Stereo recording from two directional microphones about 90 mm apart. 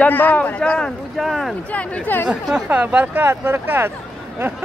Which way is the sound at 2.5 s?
15° right (ahead or behind).